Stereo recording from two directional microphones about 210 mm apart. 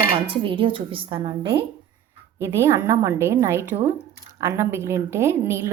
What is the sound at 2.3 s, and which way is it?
A woman's voice, 10° right (ahead or behind).